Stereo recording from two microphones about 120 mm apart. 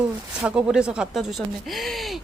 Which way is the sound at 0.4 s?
10° right (ahead or behind).